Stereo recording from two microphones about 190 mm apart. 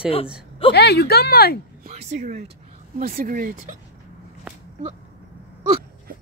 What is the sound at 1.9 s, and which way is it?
Speech, 35° right (ahead or behind).